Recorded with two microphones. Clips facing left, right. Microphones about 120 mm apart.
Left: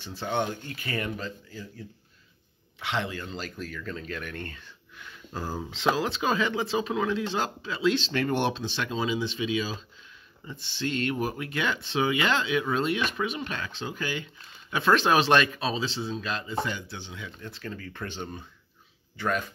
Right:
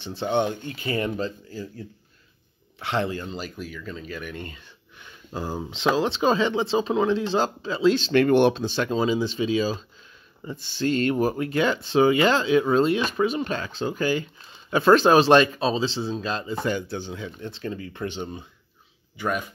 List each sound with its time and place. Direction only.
0.0 s speech: 25° right (ahead or behind)
2.8 s speech: 40° right (ahead or behind)
3.3 s speech: 10° right (ahead or behind); by 8.0 s 35° right (ahead or behind)
8.0 s speech: 60° right (ahead or behind); by 16.5 s 35° right (ahead or behind)
16.6 s speech: 45° right (ahead or behind)
17.4 s speech: 25° right (ahead or behind)